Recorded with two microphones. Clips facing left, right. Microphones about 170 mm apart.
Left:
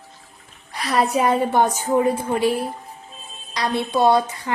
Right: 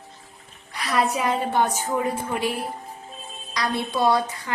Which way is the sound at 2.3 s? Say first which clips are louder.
Left 6 dB; 30° left (ahead or behind).